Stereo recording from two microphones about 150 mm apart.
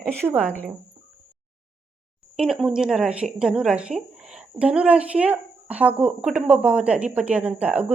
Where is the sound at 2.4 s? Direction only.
5° right (ahead or behind).